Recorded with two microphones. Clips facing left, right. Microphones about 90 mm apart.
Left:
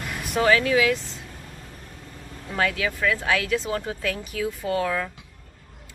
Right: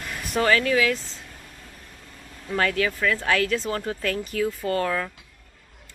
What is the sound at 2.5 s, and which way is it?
Speech, 10° left (ahead or behind).